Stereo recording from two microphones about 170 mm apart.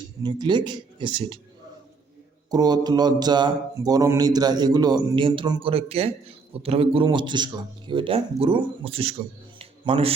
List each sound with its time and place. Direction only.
0.2 s speech: 25° right (ahead or behind)
2.5 s speech: 25° right (ahead or behind)
9.6 s a sound: 35° right (ahead or behind)